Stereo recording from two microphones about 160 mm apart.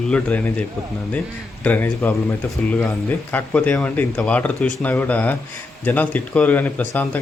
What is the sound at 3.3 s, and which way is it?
Speech, 10° left (ahead or behind).